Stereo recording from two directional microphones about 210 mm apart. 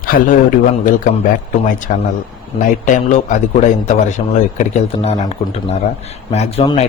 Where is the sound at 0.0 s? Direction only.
45° left (ahead or behind).